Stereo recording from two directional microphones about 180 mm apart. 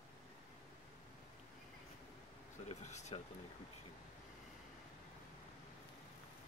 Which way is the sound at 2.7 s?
40° left (ahead or behind).